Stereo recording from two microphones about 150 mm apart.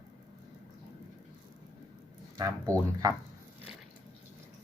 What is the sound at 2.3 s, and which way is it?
Speech, 20° right (ahead or behind).